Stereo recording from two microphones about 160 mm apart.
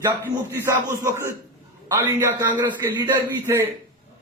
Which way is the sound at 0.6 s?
15° right (ahead or behind).